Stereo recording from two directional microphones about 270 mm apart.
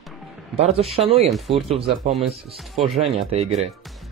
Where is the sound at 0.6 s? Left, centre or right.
Right.